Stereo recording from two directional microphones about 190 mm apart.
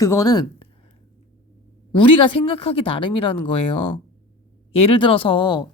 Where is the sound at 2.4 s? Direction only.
30° left (ahead or behind).